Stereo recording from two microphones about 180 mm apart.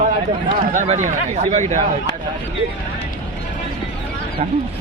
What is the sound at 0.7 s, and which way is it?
Speech, 45° right (ahead or behind).